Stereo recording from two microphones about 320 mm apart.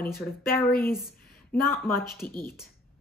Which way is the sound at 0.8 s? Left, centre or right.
Centre.